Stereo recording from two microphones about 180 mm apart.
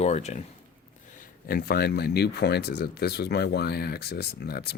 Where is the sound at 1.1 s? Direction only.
55° left (ahead or behind).